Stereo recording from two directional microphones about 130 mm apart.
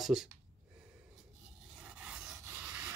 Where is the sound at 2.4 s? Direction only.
15° right (ahead or behind).